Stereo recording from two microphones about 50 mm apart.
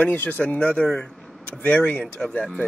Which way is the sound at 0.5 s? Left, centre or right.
Left.